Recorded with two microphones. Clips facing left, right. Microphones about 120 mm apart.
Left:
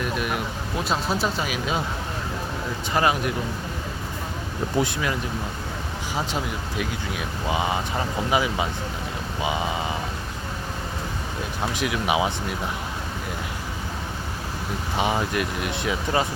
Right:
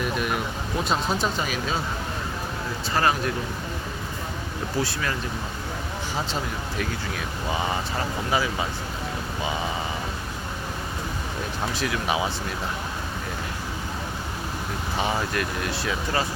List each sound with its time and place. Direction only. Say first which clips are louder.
0.0 s a sound: even; centre (ahead or behind)
0.9 s speech: left 1 dB; 5° left (ahead or behind)
2.9 s speech: left 1 dB; 15° left (ahead or behind)
4.8 s speech: left 3 dB; 20° left (ahead or behind)
6.1 s speech: left 2 dB; 10° left (ahead or behind)
11.7 s speech: left 3 dB; 15° left (ahead or behind)
14.9 s speech: left 2 dB; 15° left (ahead or behind)